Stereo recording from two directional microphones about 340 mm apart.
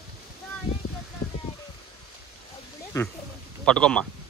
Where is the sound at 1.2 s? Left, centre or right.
Left.